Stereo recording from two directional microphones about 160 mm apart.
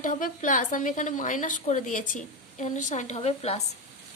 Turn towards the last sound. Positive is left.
turn(degrees=40)  # may be behind; listen again after turning